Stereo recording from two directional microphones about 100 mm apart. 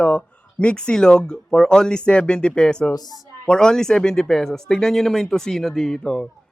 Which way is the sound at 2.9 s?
40° left (ahead or behind).